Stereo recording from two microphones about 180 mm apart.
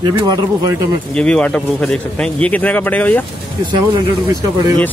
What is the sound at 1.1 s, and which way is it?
A man's voice, 5° left (ahead or behind).